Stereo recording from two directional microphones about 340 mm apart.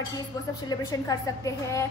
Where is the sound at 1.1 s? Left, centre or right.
Centre.